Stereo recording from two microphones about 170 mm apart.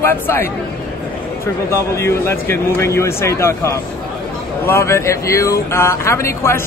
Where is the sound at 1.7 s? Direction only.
15° left (ahead or behind).